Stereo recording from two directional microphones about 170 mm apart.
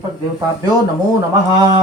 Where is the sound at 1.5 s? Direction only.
20° right (ahead or behind).